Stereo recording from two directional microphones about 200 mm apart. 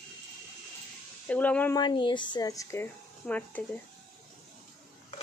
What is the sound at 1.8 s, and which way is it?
Speech, 20° left (ahead or behind).